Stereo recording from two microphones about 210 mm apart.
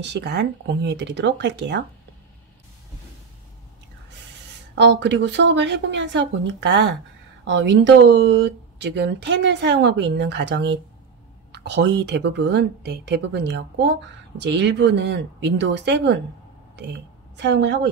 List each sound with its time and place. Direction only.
0.0 s speech: 55° right (ahead or behind)
4.7 s speech: 55° right (ahead or behind)
17.4 s speech: 55° right (ahead or behind)